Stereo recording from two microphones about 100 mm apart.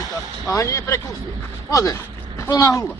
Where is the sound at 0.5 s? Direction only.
30° left (ahead or behind).